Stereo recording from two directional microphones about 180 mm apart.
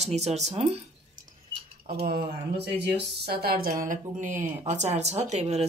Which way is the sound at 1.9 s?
60° right (ahead or behind).